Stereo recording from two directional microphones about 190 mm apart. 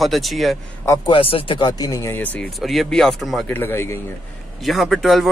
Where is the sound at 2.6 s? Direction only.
Centre (ahead or behind).